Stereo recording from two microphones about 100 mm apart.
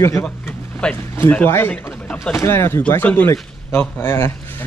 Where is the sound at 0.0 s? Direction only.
25° left (ahead or behind).